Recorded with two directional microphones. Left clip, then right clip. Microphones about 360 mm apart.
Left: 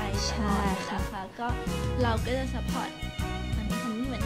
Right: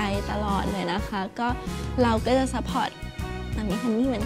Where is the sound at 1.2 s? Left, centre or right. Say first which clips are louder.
Right 5 dB; right.